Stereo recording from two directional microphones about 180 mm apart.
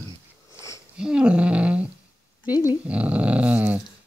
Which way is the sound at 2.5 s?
20° left (ahead or behind).